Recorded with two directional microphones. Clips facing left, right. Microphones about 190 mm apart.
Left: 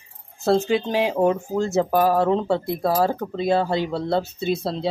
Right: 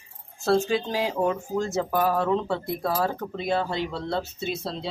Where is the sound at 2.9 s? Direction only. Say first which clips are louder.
Left 6 dB; 35° left (ahead or behind).